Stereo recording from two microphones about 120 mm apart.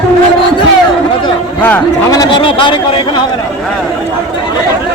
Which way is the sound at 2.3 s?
45° left (ahead or behind).